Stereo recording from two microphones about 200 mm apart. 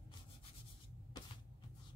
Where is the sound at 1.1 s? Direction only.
20° left (ahead or behind).